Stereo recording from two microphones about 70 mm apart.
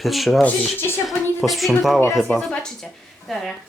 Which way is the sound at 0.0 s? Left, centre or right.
Centre.